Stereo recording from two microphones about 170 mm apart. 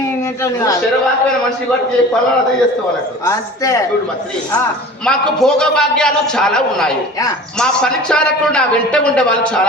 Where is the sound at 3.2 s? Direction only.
20° left (ahead or behind).